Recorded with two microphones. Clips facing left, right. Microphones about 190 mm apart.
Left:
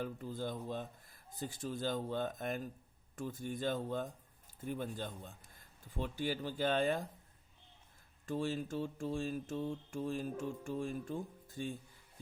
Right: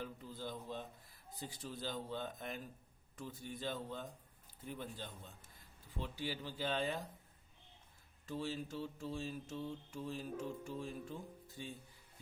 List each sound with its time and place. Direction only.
0.0 s speech: 50° left (ahead or behind)
1.4 s mantra: 45° left (ahead or behind)
8.3 s mantra: 50° left (ahead or behind)